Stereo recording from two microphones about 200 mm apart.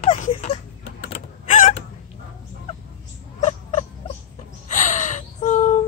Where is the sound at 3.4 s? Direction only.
30° left (ahead or behind).